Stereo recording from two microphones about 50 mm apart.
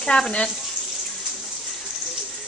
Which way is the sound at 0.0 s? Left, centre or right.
Centre.